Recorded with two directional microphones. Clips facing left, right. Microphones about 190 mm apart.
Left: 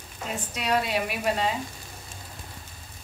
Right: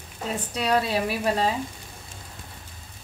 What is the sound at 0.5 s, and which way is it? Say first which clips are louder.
Speech: right 2 dB; 30° right (ahead or behind).